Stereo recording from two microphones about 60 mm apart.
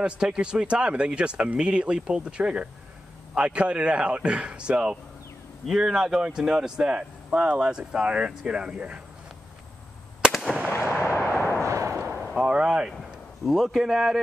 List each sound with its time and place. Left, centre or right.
0.0 s speech: centre
10.7 s artillery fire: left
11.6 s artillery fire: right
12.4 s a sound: centre
13.5 s speech: centre